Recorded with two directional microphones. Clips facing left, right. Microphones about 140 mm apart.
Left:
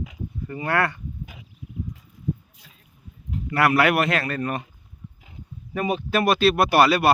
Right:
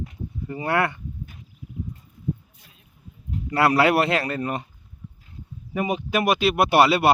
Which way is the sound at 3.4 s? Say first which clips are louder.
Right 1 dB; 30° right (ahead or behind).